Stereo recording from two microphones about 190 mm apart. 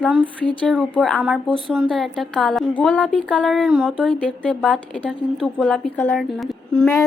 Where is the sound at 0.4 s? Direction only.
5° left (ahead or behind).